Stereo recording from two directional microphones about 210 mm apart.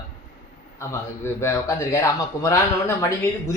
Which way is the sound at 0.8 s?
15° left (ahead or behind).